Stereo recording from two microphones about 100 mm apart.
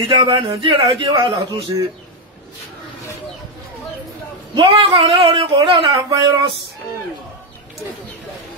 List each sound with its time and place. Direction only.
0.0 s a man's voice: 55° right (ahead or behind)
4.6 s a man's voice: 55° right (ahead or behind)
6.0 s speech: 45° right (ahead or behind)